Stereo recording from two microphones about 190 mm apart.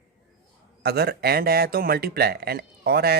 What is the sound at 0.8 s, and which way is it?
Speech, 55° right (ahead or behind).